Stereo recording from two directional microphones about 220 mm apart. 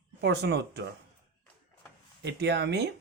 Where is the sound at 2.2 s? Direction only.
50° right (ahead or behind).